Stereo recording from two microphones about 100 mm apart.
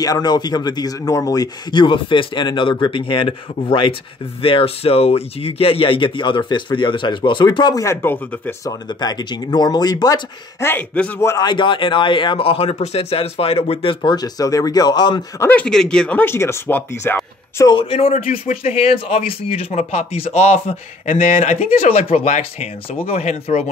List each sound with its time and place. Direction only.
0.0 s speech: 40° left (ahead or behind)
7.8 s speech: 25° left (ahead or behind)
8.6 s speech: 45° left (ahead or behind)
10.6 s a man's voice: 20° left (ahead or behind)
11.1 s speech: 30° left (ahead or behind)
11.4 s speech: 50° left (ahead or behind); by 13.9 s 70° left (ahead or behind)
14.0 s speech: 40° left (ahead or behind)
15.5 s speech: 10° left (ahead or behind); by 17.6 s 25° left (ahead or behind)
17.6 s speech: 60° left (ahead or behind)
18.6 s speech: 80° left
20.3 s a man's voice: 90° left